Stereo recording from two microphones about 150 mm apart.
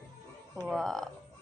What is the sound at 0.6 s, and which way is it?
Speech, centre (ahead or behind).